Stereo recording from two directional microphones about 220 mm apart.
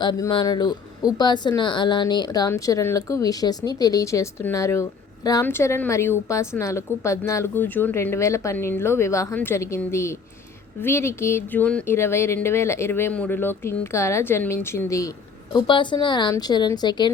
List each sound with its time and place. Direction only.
0.0 s a woman's voice: 20° left (ahead or behind)